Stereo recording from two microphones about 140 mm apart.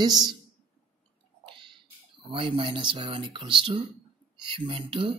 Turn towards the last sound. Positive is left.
turn(degrees=-40)  # may be behind; listen again after turning